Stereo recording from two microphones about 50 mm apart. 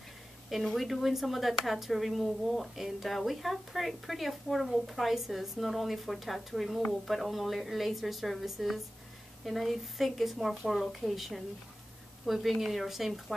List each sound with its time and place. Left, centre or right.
0.7 s a woman's voice: centre